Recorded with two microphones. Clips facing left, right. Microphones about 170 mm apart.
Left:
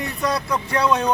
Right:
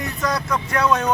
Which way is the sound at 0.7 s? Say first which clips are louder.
Even; 15° left (ahead or behind).